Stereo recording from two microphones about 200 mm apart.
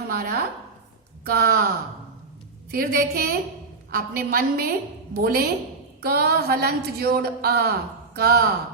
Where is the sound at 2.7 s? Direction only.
45° right (ahead or behind).